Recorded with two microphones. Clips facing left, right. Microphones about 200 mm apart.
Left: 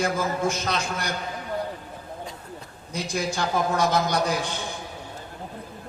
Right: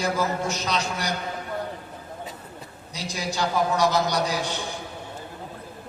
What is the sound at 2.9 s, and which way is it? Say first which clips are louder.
A man's voice: left 3 dB; 50° left (ahead or behind).